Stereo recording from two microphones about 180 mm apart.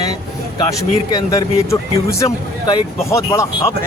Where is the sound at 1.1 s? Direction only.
20° left (ahead or behind).